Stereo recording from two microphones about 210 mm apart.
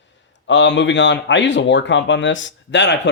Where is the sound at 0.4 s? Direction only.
60° left (ahead or behind).